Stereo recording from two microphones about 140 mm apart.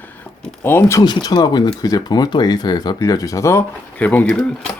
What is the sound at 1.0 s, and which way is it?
Speech, 30° left (ahead or behind).